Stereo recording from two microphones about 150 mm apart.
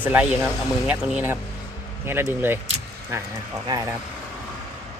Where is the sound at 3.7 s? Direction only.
25° right (ahead or behind).